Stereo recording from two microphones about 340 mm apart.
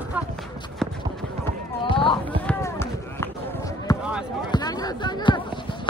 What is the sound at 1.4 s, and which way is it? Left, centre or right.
Basketball bounce, centre.